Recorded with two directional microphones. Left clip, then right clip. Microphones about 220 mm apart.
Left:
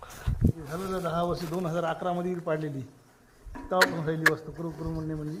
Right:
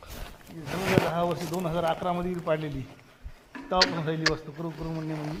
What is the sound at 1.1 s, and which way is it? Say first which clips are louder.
Speech: right 1 dB; 25° left (ahead or behind).